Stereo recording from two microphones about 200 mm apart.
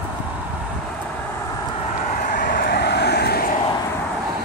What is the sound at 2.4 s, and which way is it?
Vehicle, 50° left (ahead or behind).